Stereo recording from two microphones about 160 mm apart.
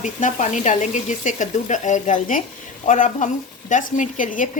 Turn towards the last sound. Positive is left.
turn(degrees=55)  # may be behind; listen again after turning